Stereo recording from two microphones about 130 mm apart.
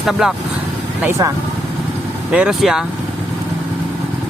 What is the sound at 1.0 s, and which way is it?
Speech, 20° right (ahead or behind).